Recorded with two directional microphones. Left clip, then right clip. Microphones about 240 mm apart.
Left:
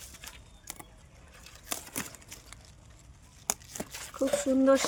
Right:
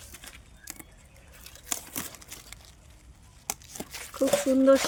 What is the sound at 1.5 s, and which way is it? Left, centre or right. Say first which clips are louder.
Crumpling: right 2 dB; centre.